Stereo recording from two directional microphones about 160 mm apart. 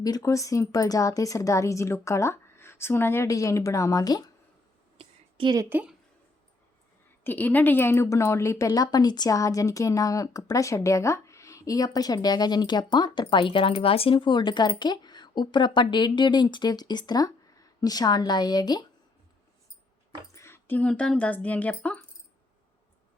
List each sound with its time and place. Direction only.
0.0 s a woman's voice: 20° left (ahead or behind)
4.9 s a sound: 30° right (ahead or behind)
5.6 s a woman's voice: 10° right (ahead or behind)
7.3 s a woman's voice: 10° left (ahead or behind)
20.3 s speech: 15° left (ahead or behind)